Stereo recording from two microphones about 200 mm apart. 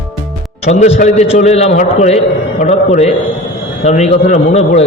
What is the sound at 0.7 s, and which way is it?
A man's voice, 35° left (ahead or behind).